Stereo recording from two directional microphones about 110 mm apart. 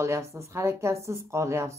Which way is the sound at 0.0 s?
25° right (ahead or behind).